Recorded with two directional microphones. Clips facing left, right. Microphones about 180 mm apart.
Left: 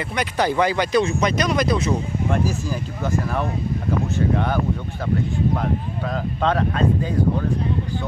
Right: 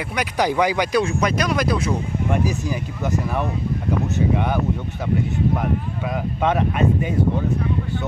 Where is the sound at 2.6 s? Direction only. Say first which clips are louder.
Right 1 dB; 20° right (ahead or behind).